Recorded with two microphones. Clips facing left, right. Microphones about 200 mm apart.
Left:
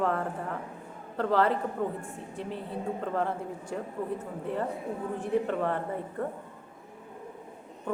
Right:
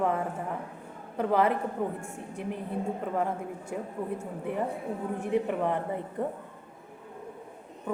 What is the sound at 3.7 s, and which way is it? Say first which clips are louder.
A woman's voice: even; 10° right (ahead or behind).